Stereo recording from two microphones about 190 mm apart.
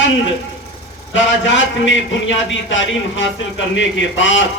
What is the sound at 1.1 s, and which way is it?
A man's voice, 80° left.